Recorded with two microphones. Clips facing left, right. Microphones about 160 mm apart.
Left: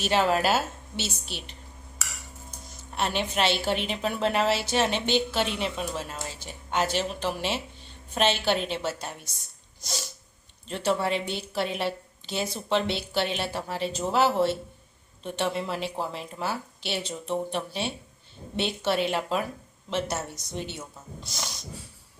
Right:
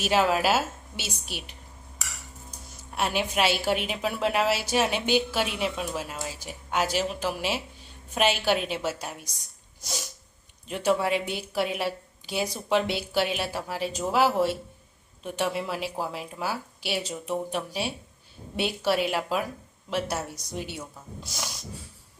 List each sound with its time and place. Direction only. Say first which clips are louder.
0.0 s speech: even; 5° right (ahead or behind)
9.8 s sneeze: even; 10° right (ahead or behind)
10.7 s speech: right 2 dB; 10° right (ahead or behind)